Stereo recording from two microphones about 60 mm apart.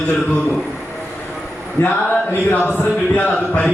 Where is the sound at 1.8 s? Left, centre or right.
Left.